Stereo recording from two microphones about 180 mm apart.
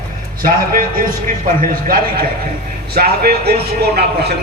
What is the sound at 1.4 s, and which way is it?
A man's voice, 50° right (ahead or behind).